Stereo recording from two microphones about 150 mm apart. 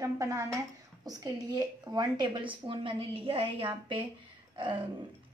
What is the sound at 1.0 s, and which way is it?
A woman's voice, 25° right (ahead or behind).